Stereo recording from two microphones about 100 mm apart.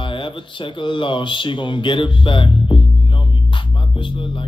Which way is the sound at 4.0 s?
55° left (ahead or behind).